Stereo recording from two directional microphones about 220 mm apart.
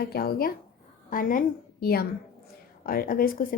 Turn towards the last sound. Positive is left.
turn(degrees=40)  # may be behind; listen again after turning